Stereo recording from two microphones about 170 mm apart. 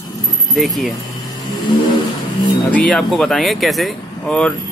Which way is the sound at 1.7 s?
25° left (ahead or behind).